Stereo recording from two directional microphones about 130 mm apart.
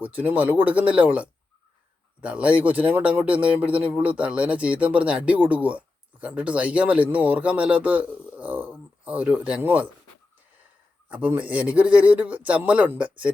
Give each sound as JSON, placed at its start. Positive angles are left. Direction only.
{"t": 0.0, "sound": "speech", "side_deg": -10}
{"t": 11.1, "sound": "speech", "side_deg": -10}